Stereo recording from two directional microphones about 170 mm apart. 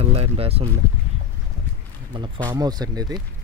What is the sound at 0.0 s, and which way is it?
Speech, 35° right (ahead or behind).